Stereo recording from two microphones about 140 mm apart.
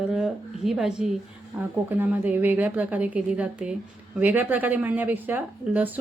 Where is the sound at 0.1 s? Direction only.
5° right (ahead or behind).